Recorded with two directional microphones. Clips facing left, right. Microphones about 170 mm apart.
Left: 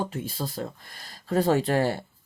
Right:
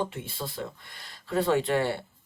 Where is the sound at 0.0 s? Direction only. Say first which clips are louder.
Left 2 dB; 40° left (ahead or behind).